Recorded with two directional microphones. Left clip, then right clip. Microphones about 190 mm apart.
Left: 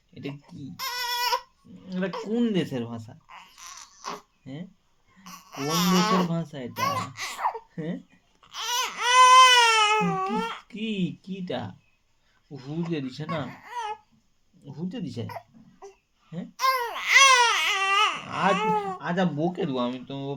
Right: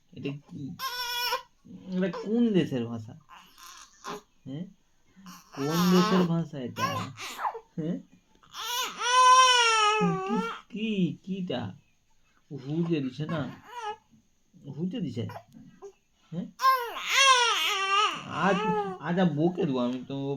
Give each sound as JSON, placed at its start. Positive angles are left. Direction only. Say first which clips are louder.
{"t": 0.1, "sound": "a sound", "louder": "right 1 dB", "side_deg": 25}
{"t": 0.8, "sound": "goat", "louder": "left 3 dB", "side_deg": 25}
{"t": 1.9, "sound": "bleat", "louder": "left 1 dB", "side_deg": 25}
{"t": 5.5, "sound": "a sound", "louder": "left 2 dB", "side_deg": 20}
{"t": 6.1, "sound": "speech", "louder": "left 2 dB", "side_deg": 25}
{"t": 8.5, "sound": "baby cry", "louder": "left 4 dB", "side_deg": 25}
{"t": 12.5, "sound": "speech", "louder": "right 2 dB", "side_deg": 20}
{"t": 16.3, "sound": "babbling", "louder": "right 1 dB", "side_deg": 20}